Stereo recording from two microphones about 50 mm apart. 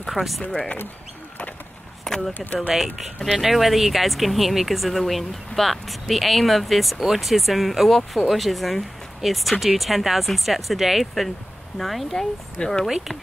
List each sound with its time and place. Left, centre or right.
0.1 s speech: centre
0.5 s speech: left
2.0 s a sound: centre
2.3 s speech: left
2.7 s speech: centre